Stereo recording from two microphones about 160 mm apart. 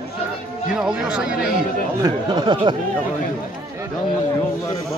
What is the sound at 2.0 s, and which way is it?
Speech, 25° right (ahead or behind).